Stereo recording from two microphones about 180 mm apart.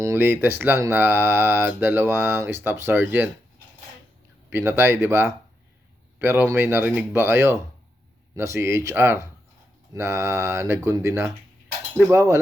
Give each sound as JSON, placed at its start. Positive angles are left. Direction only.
{"t": 0.0, "sound": "speech", "side_deg": -15}
{"t": 4.4, "sound": "speech", "side_deg": -10}